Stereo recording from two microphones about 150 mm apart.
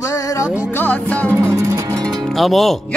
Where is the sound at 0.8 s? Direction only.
10° left (ahead or behind).